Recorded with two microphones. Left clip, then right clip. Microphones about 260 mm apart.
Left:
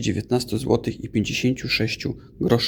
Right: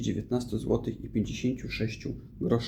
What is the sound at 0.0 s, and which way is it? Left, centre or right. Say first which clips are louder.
Speech: left 8 dB; left.